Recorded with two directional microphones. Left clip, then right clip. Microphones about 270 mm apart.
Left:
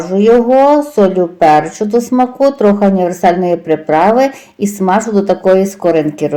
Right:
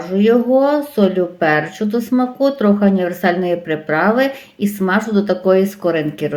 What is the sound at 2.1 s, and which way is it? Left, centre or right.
Speech, left.